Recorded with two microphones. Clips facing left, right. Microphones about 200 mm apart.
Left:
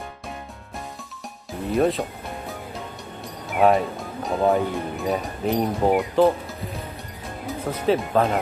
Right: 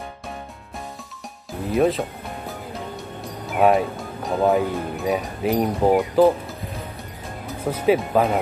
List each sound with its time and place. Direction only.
1.7 s music: centre (ahead or behind)
3.4 s speech: centre (ahead or behind)
7.7 s speech: centre (ahead or behind)